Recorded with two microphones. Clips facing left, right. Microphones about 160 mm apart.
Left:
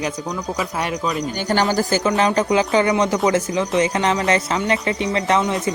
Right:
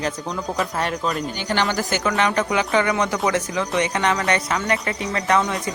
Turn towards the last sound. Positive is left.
turn(degrees=25)  # may be behind; listen again after turning